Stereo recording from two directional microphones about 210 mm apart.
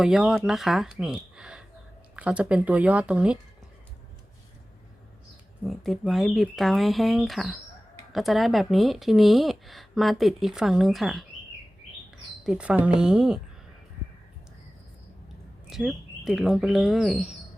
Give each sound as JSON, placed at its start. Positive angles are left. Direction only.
{"t": 0.0, "sound": "speech", "side_deg": -5}
{"t": 5.6, "sound": "speech", "side_deg": 0}
{"t": 12.5, "sound": "speech", "side_deg": -5}
{"t": 15.7, "sound": "speech", "side_deg": 0}